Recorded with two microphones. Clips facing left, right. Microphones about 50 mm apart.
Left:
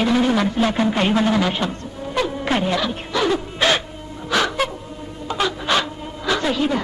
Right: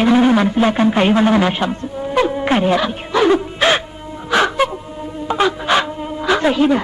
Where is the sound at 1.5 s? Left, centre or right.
Centre.